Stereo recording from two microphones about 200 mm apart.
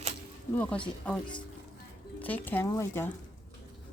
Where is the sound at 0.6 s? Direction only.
5° left (ahead or behind).